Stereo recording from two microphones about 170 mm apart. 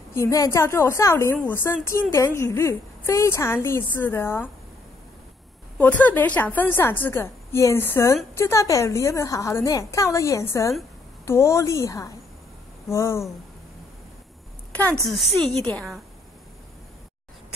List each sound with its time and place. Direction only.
0.1 s a woman's voice: 15° left (ahead or behind)
5.8 s a woman's voice: 10° left (ahead or behind)
14.7 s a sound: 10° left (ahead or behind)
15.0 s a woman's voice: centre (ahead or behind)
15.4 s a woman's voice: 10° left (ahead or behind)